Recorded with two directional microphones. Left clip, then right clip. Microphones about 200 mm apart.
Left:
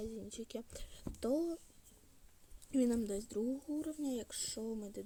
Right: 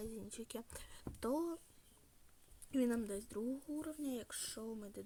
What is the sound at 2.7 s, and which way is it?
Speech, 5° left (ahead or behind).